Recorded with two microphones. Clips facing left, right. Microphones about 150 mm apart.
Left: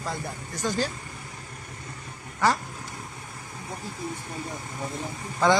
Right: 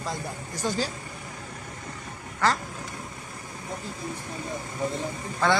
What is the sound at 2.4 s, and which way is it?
Speech, 15° left (ahead or behind).